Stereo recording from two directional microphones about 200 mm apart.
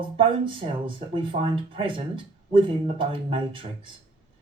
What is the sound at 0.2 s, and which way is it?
Speech, 25° right (ahead or behind).